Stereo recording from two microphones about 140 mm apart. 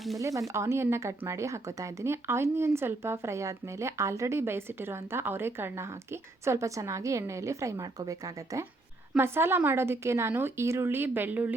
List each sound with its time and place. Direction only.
0.2 s speech: 20° right (ahead or behind)
9.1 s a woman's voice: 15° right (ahead or behind)